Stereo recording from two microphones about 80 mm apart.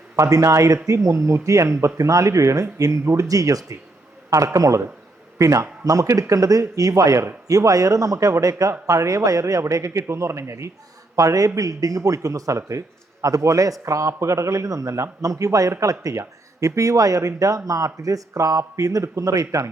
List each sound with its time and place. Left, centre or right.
0.2 s a man's voice: right